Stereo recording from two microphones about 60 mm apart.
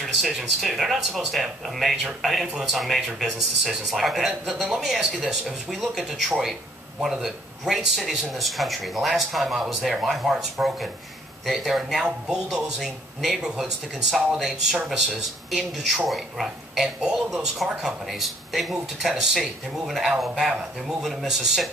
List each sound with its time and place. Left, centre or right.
0.0 s speech: centre
10.6 s speech: centre
11.4 s speech: centre